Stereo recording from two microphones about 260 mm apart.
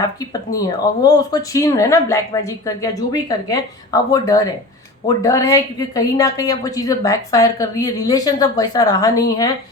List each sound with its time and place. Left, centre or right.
0.3 s a woman's voice: centre